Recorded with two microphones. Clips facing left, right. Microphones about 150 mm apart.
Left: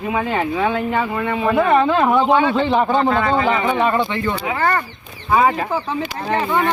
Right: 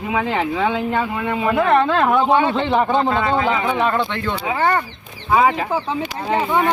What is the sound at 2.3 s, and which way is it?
Speech, 20° right (ahead or behind).